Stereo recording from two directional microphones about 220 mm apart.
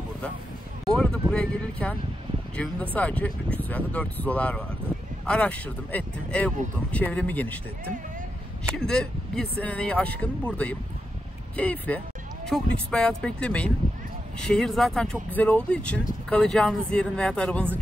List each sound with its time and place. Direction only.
0.8 s speech: 5° left (ahead or behind)
8.7 s speech: 5° left (ahead or behind)